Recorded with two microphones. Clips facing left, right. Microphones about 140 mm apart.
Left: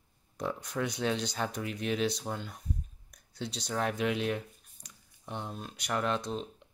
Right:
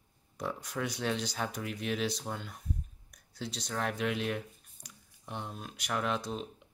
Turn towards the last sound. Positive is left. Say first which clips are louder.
# left 2 dB
turn(degrees=-5)  # may be behind; listen again after turning